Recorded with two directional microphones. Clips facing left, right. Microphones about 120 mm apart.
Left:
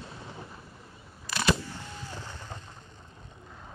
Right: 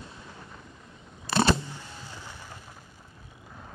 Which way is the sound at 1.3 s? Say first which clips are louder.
Right 4 dB; 30° right (ahead or behind).